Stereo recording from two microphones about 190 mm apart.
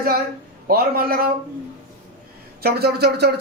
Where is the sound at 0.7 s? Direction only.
50° right (ahead or behind).